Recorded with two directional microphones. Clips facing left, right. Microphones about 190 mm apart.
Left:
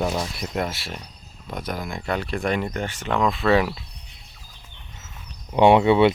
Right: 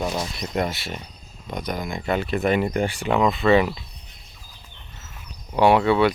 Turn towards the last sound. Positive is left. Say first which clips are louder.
# left 2 dB
turn(degrees=20)  # may be behind; listen again after turning